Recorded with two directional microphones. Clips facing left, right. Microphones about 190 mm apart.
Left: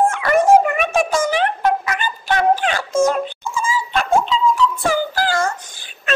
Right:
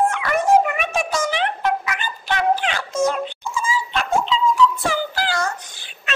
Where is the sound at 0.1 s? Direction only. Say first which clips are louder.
Left 4 dB; 45° left (ahead or behind).